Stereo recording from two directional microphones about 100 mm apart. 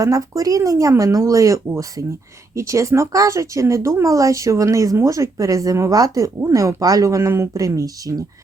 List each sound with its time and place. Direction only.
0.0 s speech: 35° right (ahead or behind)